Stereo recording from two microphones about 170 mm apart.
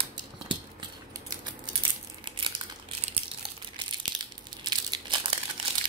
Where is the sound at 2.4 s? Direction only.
30° right (ahead or behind).